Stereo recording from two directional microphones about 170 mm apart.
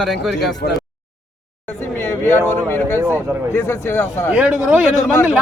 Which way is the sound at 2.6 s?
15° left (ahead or behind).